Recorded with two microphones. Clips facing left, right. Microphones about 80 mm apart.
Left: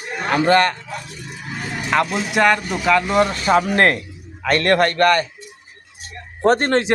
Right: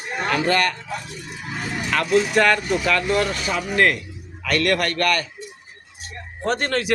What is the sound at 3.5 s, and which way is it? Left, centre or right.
Speech, left.